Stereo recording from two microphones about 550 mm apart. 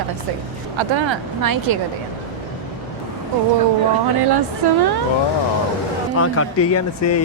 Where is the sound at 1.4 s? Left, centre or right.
Right.